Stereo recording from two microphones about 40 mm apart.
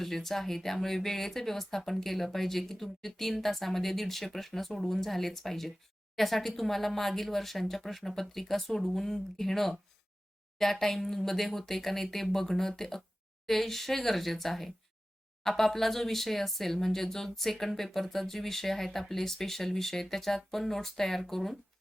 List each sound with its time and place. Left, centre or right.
0.0 s speech: centre